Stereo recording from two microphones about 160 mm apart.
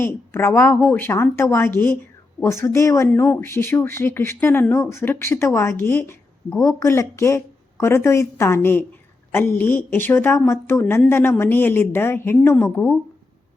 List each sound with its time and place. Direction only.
0.0 s speech: 15° left (ahead or behind)